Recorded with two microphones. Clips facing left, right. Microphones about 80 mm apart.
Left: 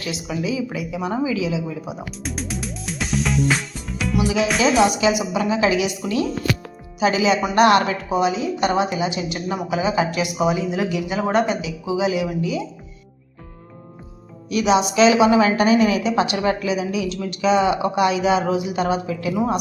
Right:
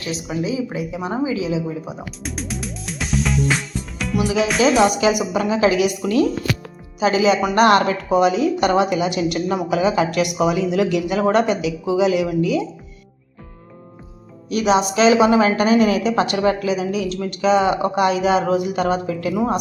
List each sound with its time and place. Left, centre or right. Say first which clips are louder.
0.0 s a woman's voice: right 1 dB; right
2.2 s music: even; centre
4.9 s a woman's voice: right 1 dB; right
14.5 s a woman's voice: right 1 dB; right